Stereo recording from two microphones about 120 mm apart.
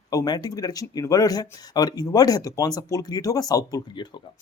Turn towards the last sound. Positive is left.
turn(degrees=35)  # may be behind; listen again after turning